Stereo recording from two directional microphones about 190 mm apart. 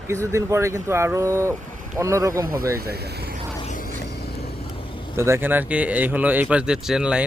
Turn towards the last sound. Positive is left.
turn(degrees=-5)  # may be behind; listen again after turning